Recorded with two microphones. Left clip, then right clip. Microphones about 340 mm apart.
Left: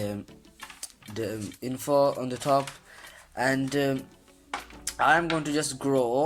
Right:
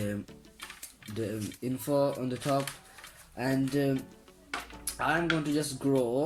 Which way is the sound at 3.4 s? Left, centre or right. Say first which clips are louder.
Left 4 dB; centre.